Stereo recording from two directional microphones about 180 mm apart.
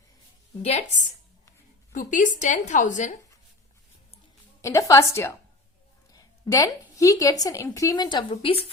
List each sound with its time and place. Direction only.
0.6 s a woman's voice: 40° left (ahead or behind)
4.6 s a woman's voice: 15° left (ahead or behind); by 8.6 s 30° left (ahead or behind)